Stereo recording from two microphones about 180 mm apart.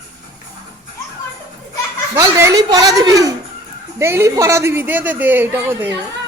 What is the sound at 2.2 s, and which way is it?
A woman's voice, 15° right (ahead or behind).